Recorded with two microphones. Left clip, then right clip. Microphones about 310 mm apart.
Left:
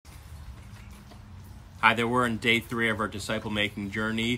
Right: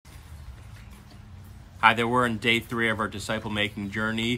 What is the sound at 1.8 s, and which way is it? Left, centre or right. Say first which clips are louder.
Speech: right 2 dB; centre.